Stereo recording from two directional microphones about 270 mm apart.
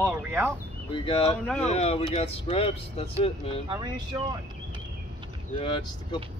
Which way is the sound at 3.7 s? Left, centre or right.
Centre.